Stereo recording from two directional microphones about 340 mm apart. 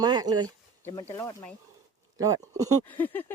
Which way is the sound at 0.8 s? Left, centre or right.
Centre.